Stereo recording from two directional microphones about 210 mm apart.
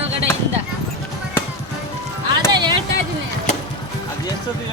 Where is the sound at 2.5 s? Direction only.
20° right (ahead or behind).